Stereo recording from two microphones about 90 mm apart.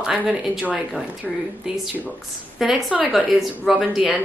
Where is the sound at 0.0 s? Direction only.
5° right (ahead or behind).